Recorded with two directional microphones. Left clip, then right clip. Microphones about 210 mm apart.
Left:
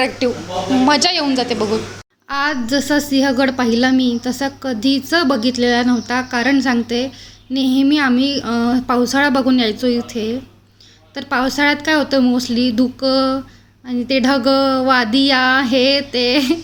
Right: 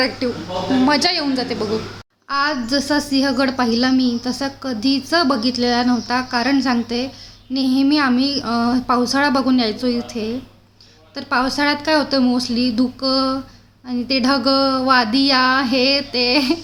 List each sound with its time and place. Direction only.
0.9 s a woman's voice: 5° left (ahead or behind)